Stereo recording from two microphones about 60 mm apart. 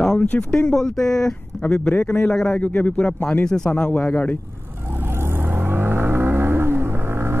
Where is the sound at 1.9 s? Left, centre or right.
Left.